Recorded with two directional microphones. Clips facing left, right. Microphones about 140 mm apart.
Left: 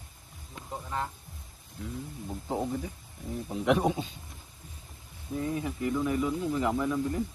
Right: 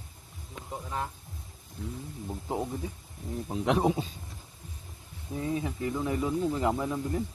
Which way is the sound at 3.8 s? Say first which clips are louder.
Right 2 dB; 25° right (ahead or behind).